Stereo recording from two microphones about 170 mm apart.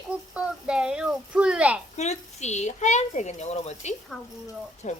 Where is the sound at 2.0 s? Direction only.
40° left (ahead or behind).